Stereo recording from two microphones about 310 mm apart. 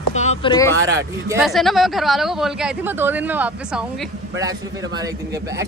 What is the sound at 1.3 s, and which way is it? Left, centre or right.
Speech, centre.